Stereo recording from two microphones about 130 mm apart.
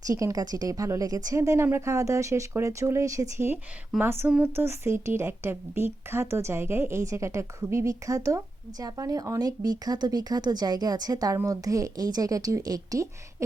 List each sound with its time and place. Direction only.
0.1 s a woman's voice: 25° right (ahead or behind)